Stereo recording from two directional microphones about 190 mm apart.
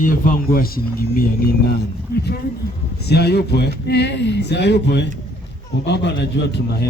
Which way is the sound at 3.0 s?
60° left (ahead or behind).